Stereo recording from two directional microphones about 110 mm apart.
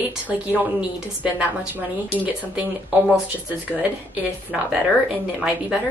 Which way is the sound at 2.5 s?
10° right (ahead or behind).